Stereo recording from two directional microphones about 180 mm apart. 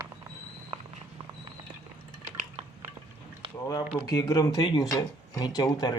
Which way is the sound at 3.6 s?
20° left (ahead or behind).